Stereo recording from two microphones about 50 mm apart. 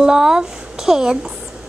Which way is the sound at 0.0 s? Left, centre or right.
Centre.